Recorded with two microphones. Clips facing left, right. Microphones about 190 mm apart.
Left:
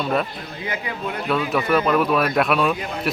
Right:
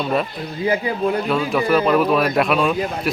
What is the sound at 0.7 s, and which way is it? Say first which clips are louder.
Speech: right 9 dB; 30° right (ahead or behind).